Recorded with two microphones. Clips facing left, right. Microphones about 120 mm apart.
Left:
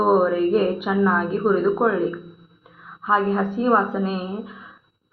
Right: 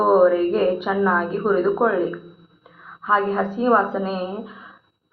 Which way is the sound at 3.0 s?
5° left (ahead or behind).